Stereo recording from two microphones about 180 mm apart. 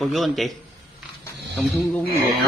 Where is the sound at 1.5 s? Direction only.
5° left (ahead or behind).